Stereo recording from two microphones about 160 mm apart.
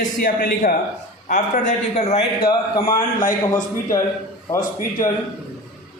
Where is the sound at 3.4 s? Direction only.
20° left (ahead or behind).